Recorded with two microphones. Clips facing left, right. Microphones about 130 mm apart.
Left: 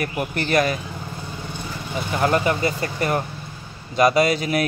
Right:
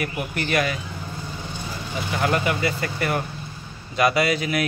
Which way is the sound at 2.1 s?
30° left (ahead or behind).